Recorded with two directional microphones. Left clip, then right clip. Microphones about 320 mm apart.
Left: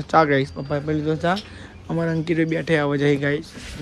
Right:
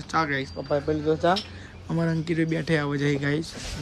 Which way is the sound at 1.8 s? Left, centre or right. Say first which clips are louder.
Left 4 dB; centre.